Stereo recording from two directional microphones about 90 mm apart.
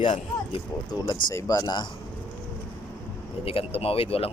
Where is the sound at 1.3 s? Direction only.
40° left (ahead or behind).